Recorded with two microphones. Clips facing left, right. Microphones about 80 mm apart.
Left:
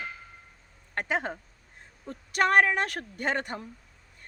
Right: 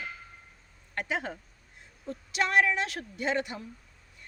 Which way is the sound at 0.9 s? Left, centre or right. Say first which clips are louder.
Left 3 dB; left.